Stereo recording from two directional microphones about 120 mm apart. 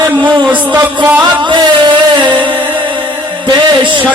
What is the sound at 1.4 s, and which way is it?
Music, 40° right (ahead or behind).